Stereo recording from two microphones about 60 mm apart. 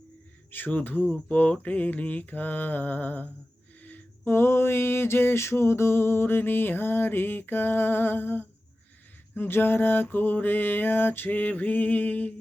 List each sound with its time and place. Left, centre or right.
0.5 s music: left
1.3 s mantra: left
4.3 s music: left